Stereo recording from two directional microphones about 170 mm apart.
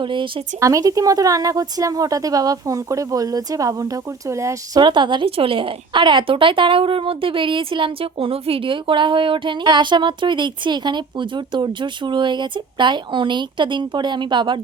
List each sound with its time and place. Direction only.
0.0 s speech: 30° right (ahead or behind)